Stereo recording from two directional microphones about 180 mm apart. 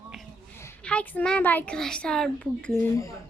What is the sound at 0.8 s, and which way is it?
Speech, 5° left (ahead or behind).